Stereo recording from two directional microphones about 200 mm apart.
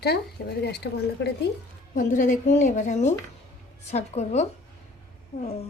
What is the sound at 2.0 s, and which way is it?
A woman's voice, 40° left (ahead or behind).